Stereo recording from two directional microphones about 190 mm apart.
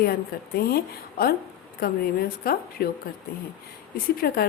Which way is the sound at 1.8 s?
50° left (ahead or behind).